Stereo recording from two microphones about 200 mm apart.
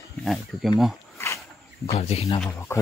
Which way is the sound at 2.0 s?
30° left (ahead or behind).